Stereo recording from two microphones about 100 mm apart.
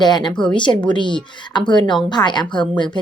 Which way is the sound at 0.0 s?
45° left (ahead or behind).